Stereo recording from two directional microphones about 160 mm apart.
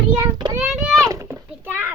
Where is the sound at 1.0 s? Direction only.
20° right (ahead or behind).